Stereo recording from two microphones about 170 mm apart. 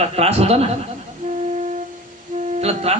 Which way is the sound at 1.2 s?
45° right (ahead or behind).